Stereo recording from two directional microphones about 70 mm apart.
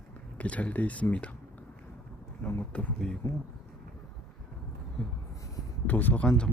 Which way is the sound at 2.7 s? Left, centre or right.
Centre.